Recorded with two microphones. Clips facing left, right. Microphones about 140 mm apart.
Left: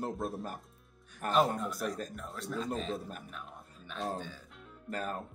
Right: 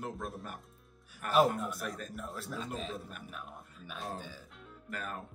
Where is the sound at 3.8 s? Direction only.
10° right (ahead or behind).